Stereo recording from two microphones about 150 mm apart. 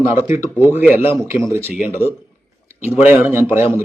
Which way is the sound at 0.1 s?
15° right (ahead or behind).